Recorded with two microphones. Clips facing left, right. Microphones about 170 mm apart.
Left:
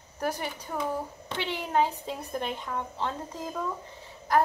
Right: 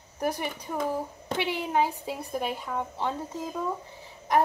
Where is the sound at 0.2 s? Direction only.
10° right (ahead or behind).